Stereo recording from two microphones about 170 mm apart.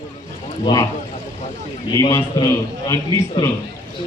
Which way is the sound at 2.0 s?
15° left (ahead or behind).